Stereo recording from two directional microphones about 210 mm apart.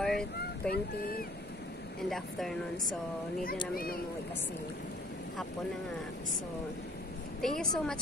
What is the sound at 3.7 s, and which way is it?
Speech, 45° left (ahead or behind).